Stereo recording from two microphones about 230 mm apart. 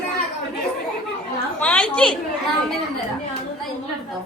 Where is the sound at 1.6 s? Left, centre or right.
Centre.